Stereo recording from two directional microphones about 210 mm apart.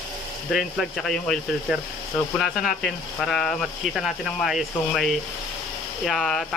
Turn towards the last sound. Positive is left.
turn(degrees=0)  # may be behind; listen again after turning